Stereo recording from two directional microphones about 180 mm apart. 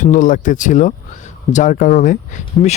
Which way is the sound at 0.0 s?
45° left (ahead or behind).